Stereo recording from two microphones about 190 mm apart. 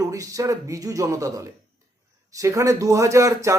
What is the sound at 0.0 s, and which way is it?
A man's voice, 15° right (ahead or behind).